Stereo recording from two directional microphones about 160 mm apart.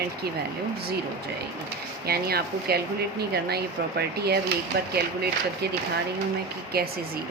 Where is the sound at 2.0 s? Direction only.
80° right.